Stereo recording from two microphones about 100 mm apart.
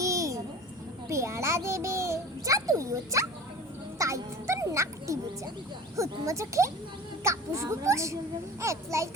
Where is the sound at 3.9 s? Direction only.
30° right (ahead or behind).